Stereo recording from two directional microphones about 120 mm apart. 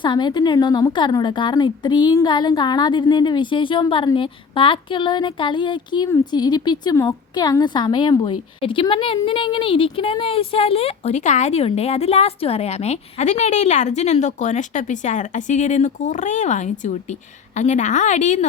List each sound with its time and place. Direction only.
0.0 s a woman's voice: 40° left (ahead or behind); by 18.4 s 85° left